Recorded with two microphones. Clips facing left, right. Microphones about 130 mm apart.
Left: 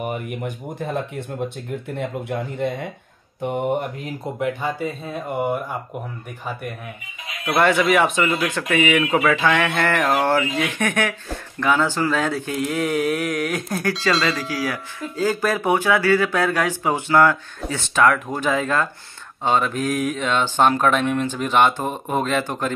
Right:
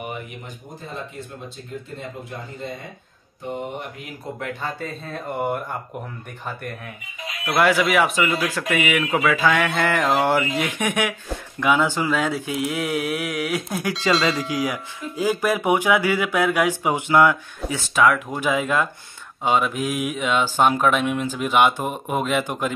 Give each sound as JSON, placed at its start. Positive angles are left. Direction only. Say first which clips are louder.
{"t": 0.3, "sound": "speech", "louder": "left 9 dB", "side_deg": 60}
{"t": 4.4, "sound": "speech", "louder": "left 6 dB", "side_deg": 15}
{"t": 7.4, "sound": "speech", "louder": "left 1 dB", "side_deg": -5}
{"t": 14.5, "sound": "speech", "louder": "right 1 dB", "side_deg": -20}